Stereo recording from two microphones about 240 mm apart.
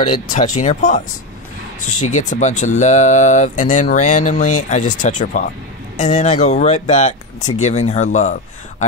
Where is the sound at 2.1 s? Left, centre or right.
Left.